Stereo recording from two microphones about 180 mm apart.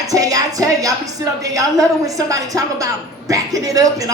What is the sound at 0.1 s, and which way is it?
Speech, 20° right (ahead or behind).